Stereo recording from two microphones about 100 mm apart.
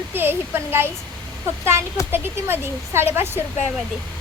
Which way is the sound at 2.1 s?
20° right (ahead or behind).